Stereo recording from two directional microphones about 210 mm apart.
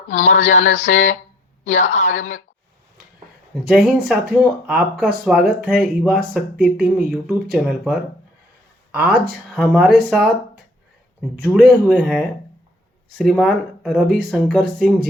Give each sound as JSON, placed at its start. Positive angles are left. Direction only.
{"t": 0.1, "sound": "a sound", "side_deg": 35}
{"t": 3.5, "sound": "speech", "side_deg": 0}
{"t": 11.5, "sound": "speech", "side_deg": 0}